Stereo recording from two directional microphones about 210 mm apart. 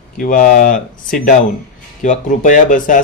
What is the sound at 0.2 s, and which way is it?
Speech, 40° left (ahead or behind).